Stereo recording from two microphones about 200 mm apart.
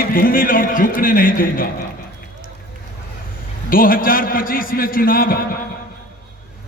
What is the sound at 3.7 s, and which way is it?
A man's voice, 45° left (ahead or behind).